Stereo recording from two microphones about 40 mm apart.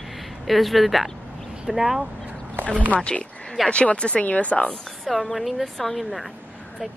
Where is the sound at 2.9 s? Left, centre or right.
Left.